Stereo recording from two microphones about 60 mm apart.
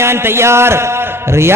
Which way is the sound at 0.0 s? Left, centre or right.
Right.